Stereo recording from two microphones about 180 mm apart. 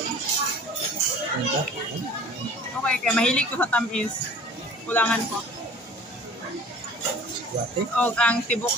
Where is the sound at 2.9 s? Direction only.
5° left (ahead or behind).